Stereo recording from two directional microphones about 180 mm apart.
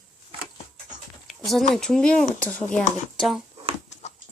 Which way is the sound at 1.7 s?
5° left (ahead or behind).